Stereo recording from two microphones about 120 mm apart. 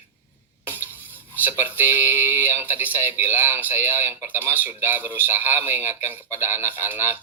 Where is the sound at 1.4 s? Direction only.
15° right (ahead or behind).